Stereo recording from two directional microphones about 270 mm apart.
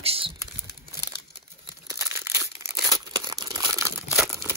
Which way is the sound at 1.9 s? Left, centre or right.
Centre.